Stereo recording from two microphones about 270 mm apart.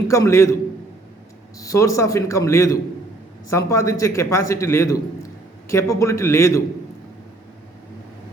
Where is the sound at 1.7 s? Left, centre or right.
Centre.